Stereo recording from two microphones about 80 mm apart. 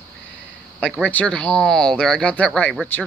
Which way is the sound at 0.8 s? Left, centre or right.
Centre.